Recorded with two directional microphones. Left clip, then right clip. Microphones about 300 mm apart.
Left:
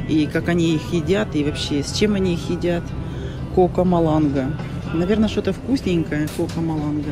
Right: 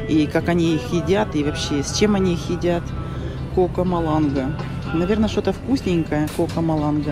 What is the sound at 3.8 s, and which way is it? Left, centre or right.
Speech, centre.